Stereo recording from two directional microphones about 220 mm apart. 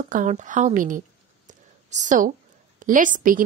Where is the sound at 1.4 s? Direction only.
35° right (ahead or behind).